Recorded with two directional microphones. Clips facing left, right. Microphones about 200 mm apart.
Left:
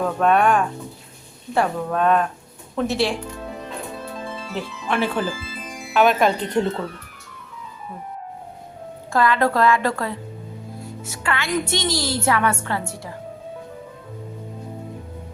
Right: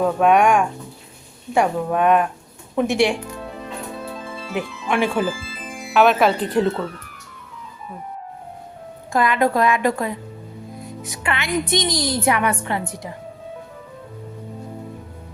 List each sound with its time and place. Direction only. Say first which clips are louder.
0.0 s a woman's voice: right 2 dB; 10° right (ahead or behind)
4.5 s a woman's voice: right 3 dB; 15° right (ahead or behind)
5.9 s speech: right 2 dB; centre (ahead or behind)
9.1 s a woman's voice: right 1 dB; 15° right (ahead or behind)